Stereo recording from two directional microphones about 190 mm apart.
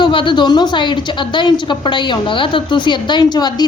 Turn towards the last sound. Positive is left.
turn(degrees=20)  # may be behind; listen again after turning